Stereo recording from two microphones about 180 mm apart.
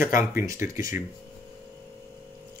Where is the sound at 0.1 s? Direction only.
50° left (ahead or behind).